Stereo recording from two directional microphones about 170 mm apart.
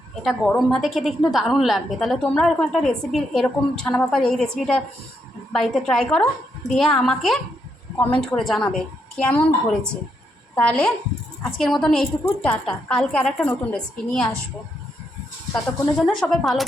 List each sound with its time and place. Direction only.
0.2 s a woman's voice: centre (ahead or behind)
16.2 s a woman's voice: centre (ahead or behind)